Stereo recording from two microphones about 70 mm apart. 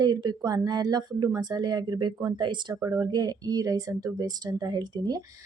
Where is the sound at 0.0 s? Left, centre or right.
Right.